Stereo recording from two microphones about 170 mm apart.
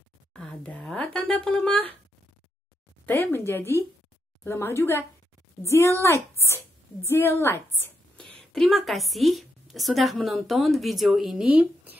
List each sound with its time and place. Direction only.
0.3 s speech: 5° left (ahead or behind)
3.1 s a woman's voice: 15° left (ahead or behind); by 12.0 s 10° right (ahead or behind)